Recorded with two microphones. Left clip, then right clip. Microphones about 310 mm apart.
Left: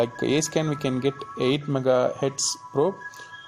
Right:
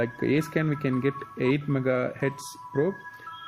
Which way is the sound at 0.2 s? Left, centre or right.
Left.